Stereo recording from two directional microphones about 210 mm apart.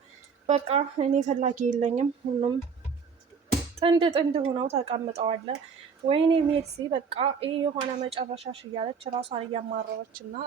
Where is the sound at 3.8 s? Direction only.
20° right (ahead or behind).